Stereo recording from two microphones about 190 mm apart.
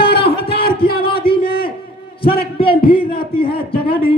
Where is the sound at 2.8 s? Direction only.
50° left (ahead or behind).